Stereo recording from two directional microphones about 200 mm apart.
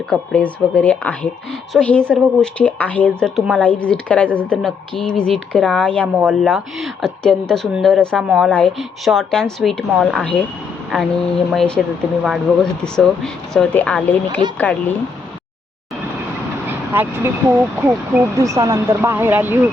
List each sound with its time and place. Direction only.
0.1 s speech: 5° left (ahead or behind)
16.6 s speech: 10° right (ahead or behind)